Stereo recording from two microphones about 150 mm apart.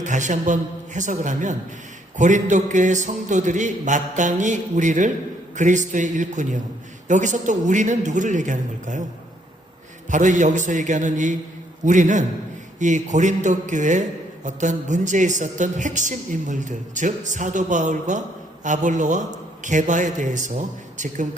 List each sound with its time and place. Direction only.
0.0 s a man's voice: 55° right (ahead or behind)
10.1 s a man's voice: 55° right (ahead or behind)